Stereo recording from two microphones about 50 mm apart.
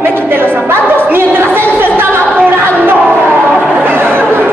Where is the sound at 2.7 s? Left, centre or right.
Right.